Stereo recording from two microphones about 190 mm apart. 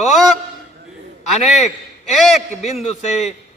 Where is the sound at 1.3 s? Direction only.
35° left (ahead or behind).